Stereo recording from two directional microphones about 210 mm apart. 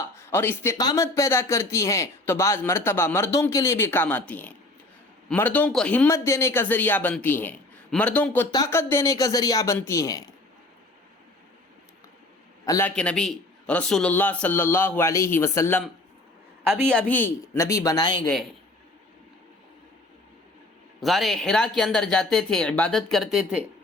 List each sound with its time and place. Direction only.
0.2 s speech: 10° left (ahead or behind)
12.6 s a man's voice: 15° left (ahead or behind)
13.0 s speech: 5° left (ahead or behind)
16.8 s speech: 5° left (ahead or behind); by 18.2 s 20° left (ahead or behind)
21.0 s speech: centre (ahead or behind)